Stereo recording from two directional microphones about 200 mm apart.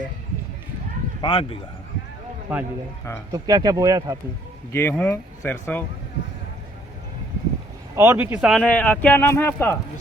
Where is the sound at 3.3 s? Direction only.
20° right (ahead or behind).